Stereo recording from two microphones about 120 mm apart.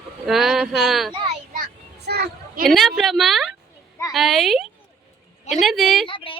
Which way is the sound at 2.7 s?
Centre (ahead or behind).